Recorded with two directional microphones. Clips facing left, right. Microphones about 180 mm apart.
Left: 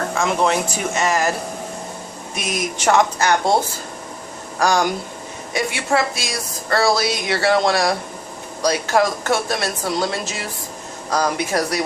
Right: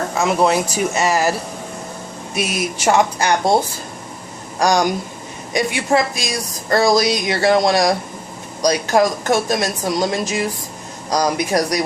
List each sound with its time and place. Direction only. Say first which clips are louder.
0.1 s a woman's voice: right 3 dB; 10° right (ahead or behind)
2.3 s a woman's voice: right 3 dB; 10° right (ahead or behind)
4.6 s a woman's voice: right 2 dB; 15° right (ahead or behind)